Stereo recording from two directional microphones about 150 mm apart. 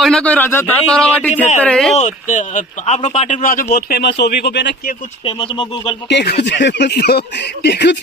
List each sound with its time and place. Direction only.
0.0 s speech: 5° left (ahead or behind)
2.0 s a man's voice: 55° left (ahead or behind)
3.7 s speech: 90° left
5.2 s speech: 40° left (ahead or behind)
6.2 s speech: 90° left